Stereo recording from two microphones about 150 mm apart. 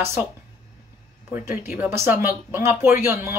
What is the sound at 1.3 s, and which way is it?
Speech, 15° right (ahead or behind).